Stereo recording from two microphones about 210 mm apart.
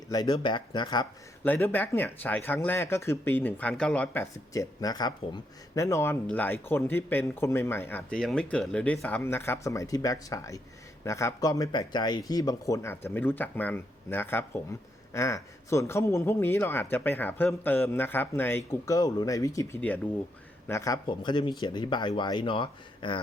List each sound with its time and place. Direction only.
0.1 s speech: 20° left (ahead or behind)